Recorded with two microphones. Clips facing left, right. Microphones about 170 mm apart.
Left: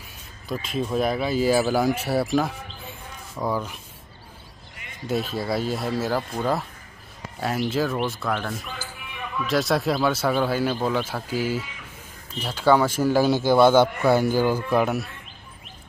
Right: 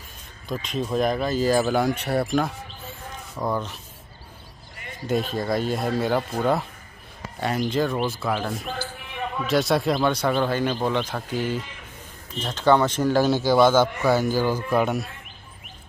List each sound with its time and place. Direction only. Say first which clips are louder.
0.5 s speech: even; centre (ahead or behind)
5.3 s speech: right 1 dB; 5° left (ahead or behind)
9.1 s a sound: right 1 dB; 35° right (ahead or behind)
9.5 s speech: right 1 dB; centre (ahead or behind)
14.7 s speech: even; centre (ahead or behind)